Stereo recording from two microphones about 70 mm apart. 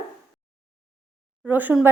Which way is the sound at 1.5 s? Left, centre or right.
Right.